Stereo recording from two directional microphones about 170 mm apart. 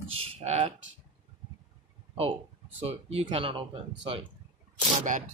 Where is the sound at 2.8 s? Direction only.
35° right (ahead or behind).